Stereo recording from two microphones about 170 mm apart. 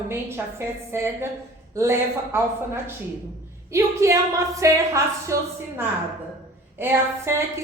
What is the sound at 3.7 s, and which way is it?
A woman's voice, 15° right (ahead or behind).